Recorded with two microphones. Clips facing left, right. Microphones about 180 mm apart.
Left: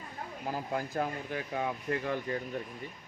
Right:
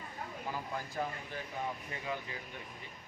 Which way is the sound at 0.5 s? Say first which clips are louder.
Left 7 dB; 55° left (ahead or behind).